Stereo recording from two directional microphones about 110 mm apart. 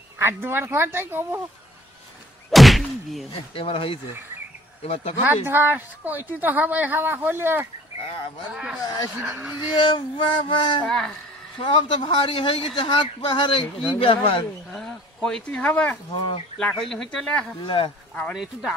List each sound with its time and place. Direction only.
0.2 s speech: 20° right (ahead or behind)
2.5 s a sound: centre (ahead or behind)
3.5 s speech: 55° left (ahead or behind)
5.2 s a woman's voice: 20° right (ahead or behind)
8.0 s speech: 65° left (ahead or behind)
8.5 s a woman's voice: 10° right (ahead or behind)
8.8 s speech: 35° left (ahead or behind)
9.2 s a woman's voice: 10° right (ahead or behind)
9.8 s speech: 45° left (ahead or behind)
10.9 s speech: 5° left (ahead or behind)
11.6 s speech: 45° left (ahead or behind)
14.7 s speech: centre (ahead or behind)
17.6 s speech: 50° left (ahead or behind)
18.3 s speech: centre (ahead or behind)